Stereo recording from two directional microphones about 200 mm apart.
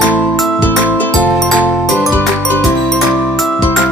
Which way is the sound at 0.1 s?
5° left (ahead or behind).